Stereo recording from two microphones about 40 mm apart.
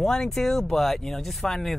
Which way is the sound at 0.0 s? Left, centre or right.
Centre.